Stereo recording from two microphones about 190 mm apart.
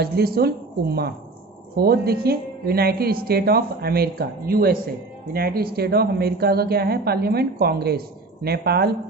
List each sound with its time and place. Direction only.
0.0 s a woman's voice: 55° right (ahead or behind)